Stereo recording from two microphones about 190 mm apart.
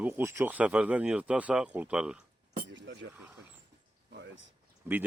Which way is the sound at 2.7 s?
75° right (ahead or behind).